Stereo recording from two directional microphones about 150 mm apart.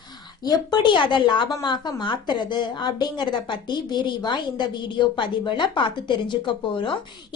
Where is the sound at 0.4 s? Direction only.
25° left (ahead or behind).